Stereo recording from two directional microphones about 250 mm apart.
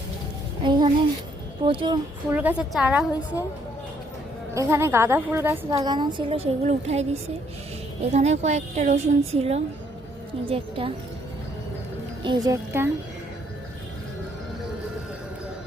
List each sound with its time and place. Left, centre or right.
0.6 s a child's voice: centre
2.3 s a woman's voice: centre
4.5 s a woman's voice: centre
12.2 s a woman's voice: centre